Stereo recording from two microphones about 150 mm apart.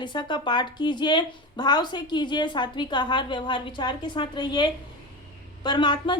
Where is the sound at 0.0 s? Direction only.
30° left (ahead or behind).